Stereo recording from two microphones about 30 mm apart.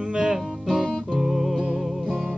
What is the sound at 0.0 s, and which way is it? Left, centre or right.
Music, right.